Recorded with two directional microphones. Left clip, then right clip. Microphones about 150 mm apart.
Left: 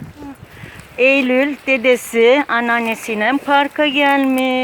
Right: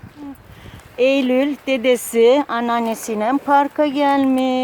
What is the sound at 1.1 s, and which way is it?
Speech, 20° right (ahead or behind).